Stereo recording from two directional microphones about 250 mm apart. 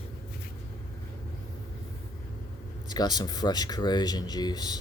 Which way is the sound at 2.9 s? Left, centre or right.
Centre.